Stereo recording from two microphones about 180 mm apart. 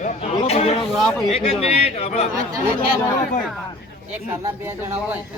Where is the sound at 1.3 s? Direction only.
35° left (ahead or behind).